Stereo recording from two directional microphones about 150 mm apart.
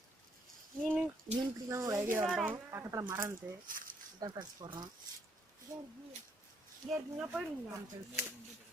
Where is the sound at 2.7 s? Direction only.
20° right (ahead or behind).